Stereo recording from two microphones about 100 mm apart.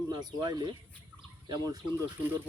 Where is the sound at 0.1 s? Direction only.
45° right (ahead or behind).